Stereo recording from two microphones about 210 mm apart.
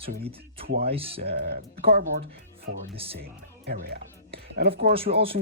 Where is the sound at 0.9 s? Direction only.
25° right (ahead or behind).